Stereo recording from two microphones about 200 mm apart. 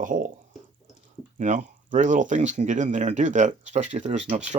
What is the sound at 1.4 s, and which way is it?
Speech, 40° right (ahead or behind).